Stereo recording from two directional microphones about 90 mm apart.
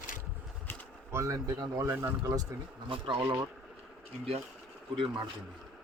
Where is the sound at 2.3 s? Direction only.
45° right (ahead or behind).